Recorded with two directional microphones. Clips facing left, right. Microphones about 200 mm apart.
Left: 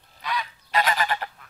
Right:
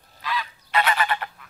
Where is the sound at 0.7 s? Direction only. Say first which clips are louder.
Right 1 dB; 40° left (ahead or behind).